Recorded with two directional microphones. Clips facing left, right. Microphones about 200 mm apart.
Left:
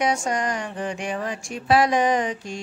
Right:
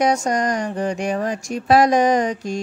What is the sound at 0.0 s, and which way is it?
Speech, 40° right (ahead or behind).